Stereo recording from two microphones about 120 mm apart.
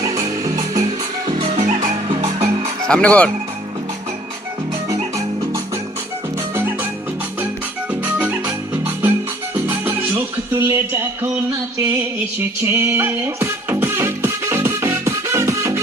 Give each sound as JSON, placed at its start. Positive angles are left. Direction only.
{"t": 0.4, "sound": "music", "side_deg": -30}
{"t": 1.5, "sound": "music", "side_deg": -90}
{"t": 2.0, "sound": "music", "side_deg": -65}
{"t": 2.8, "sound": "speech", "side_deg": 10}
{"t": 6.5, "sound": "music", "side_deg": -20}
{"t": 8.4, "sound": "music", "side_deg": -15}
{"t": 12.4, "sound": "music", "side_deg": -20}